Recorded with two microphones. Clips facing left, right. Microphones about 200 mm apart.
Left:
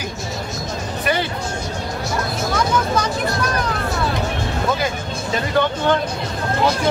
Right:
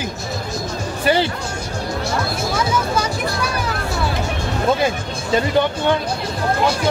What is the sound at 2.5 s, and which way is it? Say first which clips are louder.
Vehicle: left 2 dB; 5° right (ahead or behind).